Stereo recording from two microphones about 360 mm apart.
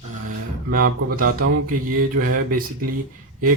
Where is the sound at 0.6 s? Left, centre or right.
Right.